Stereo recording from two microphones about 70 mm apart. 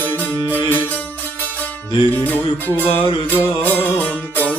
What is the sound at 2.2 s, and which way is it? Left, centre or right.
Music, left.